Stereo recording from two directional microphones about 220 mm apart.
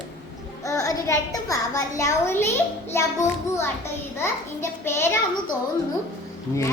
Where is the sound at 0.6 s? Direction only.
15° left (ahead or behind).